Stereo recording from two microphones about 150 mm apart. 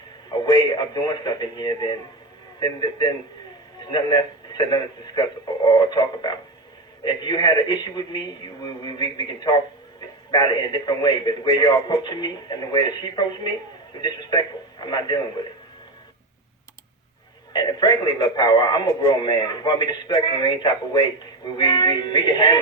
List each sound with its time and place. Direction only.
0.3 s speech: 30° left (ahead or behind)
17.5 s speech: 30° left (ahead or behind)